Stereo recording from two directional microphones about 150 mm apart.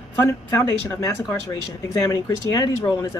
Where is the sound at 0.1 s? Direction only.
15° left (ahead or behind).